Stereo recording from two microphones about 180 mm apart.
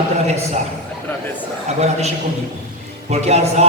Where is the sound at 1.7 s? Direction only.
35° right (ahead or behind).